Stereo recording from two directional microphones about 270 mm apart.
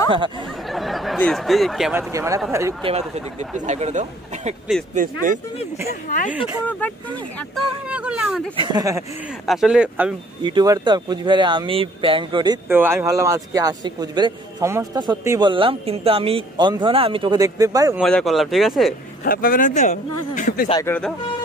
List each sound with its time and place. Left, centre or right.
0.1 s speech: centre
0.7 s speech: centre
2.9 s speech: right
6.0 s speech: left
6.8 s speech: centre
7.9 s speech: centre
8.5 s speech: centre
9.5 s speech: centre
10.4 s speech: centre
18.0 s speech: centre
19.2 s speech: left
20.7 s speech: centre